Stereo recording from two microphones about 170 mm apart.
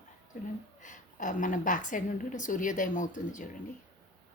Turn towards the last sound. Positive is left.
turn(degrees=50)  # may be behind; listen again after turning